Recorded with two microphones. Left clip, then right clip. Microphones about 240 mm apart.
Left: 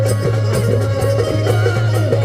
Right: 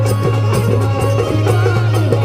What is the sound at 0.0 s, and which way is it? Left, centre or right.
Music, right.